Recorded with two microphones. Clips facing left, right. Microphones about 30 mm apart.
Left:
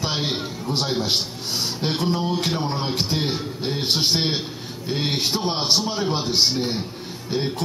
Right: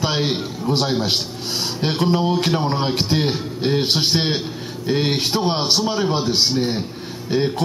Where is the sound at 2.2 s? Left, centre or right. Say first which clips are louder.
Right 4 dB; centre.